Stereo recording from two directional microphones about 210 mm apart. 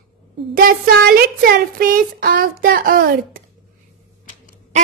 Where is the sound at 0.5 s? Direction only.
45° right (ahead or behind).